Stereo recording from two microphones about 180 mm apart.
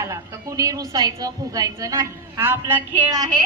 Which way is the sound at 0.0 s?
20° right (ahead or behind).